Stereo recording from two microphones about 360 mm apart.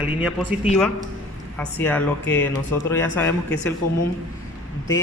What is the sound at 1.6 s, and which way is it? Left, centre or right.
A man's voice, centre.